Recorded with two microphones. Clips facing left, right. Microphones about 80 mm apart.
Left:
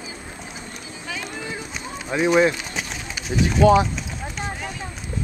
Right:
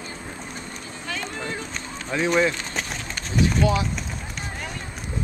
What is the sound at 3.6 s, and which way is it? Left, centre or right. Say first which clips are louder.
Speech: left 8 dB; left.